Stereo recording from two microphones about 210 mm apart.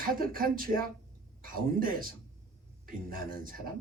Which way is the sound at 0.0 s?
45° right (ahead or behind).